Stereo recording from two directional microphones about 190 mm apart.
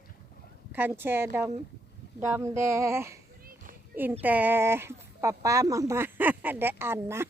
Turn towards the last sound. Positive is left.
turn(degrees=-10)  # may be behind; listen again after turning